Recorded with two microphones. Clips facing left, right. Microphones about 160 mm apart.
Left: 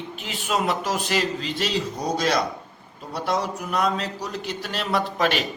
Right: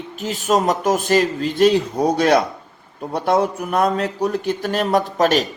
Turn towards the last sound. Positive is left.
turn(degrees=-40)  # may be behind; listen again after turning